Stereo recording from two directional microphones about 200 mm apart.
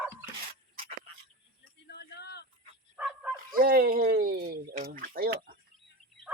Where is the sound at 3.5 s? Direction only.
50° right (ahead or behind).